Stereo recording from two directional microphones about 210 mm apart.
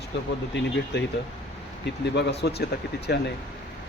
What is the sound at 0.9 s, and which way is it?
Speech, 55° left (ahead or behind).